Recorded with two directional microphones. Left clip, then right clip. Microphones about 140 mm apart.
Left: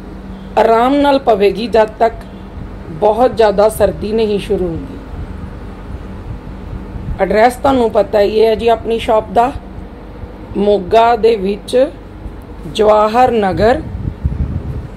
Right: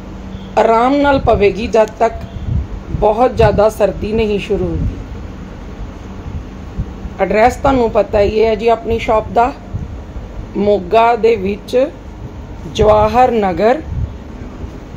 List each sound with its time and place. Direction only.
0.6 s a woman's voice: 5° left (ahead or behind)
7.2 s a woman's voice: 10° left (ahead or behind)
10.6 s a woman's voice: 15° left (ahead or behind)